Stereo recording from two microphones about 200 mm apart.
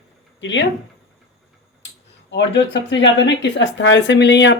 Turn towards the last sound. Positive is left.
turn(degrees=60)  # may be behind; listen again after turning